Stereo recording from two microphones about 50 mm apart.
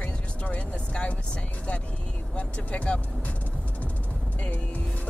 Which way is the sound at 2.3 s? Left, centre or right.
Left.